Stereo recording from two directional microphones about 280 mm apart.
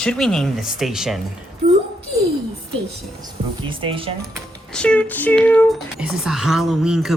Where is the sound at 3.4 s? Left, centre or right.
Centre.